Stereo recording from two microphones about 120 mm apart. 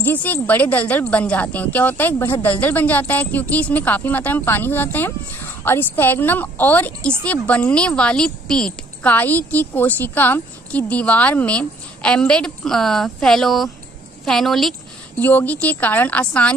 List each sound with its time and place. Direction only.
0.0 s a woman's voice: 15° left (ahead or behind)
15.1 s a woman's voice: 15° left (ahead or behind)